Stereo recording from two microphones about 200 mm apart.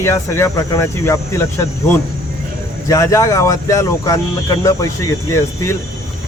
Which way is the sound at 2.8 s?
15° left (ahead or behind).